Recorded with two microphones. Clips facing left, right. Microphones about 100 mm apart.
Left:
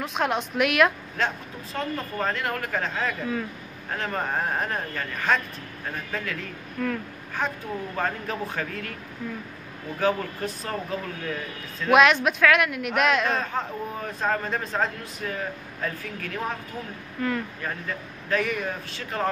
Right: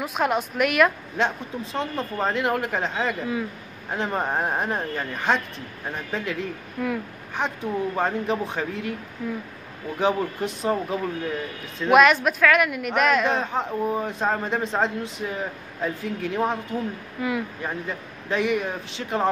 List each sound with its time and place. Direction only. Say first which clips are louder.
0.0 s speech: right 2 dB; 5° right (ahead or behind)
1.1 s a man's voice: right 3 dB; 20° right (ahead or behind)
9.9 s speech: right 2 dB; 20° right (ahead or behind)
11.9 s speech: right 2 dB; centre (ahead or behind)
13.3 s a man's voice: right 3 dB; 20° right (ahead or behind)
17.2 s a man's voice: right 1 dB; 10° right (ahead or behind)